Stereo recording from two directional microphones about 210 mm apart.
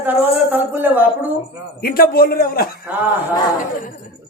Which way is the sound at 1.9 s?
45° left (ahead or behind).